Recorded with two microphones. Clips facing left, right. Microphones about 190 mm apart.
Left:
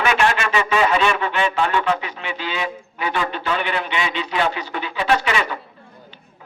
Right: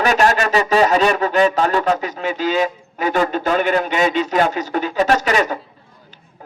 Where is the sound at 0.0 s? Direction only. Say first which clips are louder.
Right 4 dB; 40° right (ahead or behind).